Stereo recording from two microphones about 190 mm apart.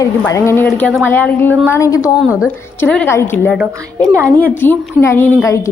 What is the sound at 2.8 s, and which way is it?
Speech, 10° left (ahead or behind).